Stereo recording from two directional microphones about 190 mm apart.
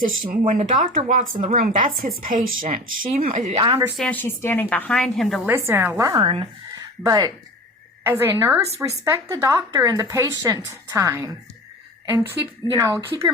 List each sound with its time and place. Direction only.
0.0 s speech: 45° right (ahead or behind)
3.6 s speech: 25° right (ahead or behind)
3.9 s a woman's voice: 5° left (ahead or behind)
5.5 s speech: 10° right (ahead or behind)